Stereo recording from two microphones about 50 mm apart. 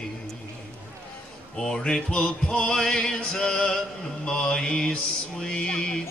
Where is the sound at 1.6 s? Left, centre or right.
Centre.